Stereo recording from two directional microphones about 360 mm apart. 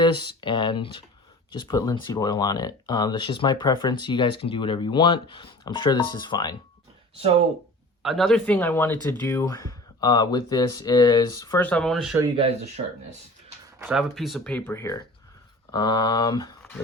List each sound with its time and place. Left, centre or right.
0.0 s speech: centre
7.2 s speech: centre
8.0 s speech: centre
12.4 s speech: centre
13.7 s speech: centre
15.7 s a sound: centre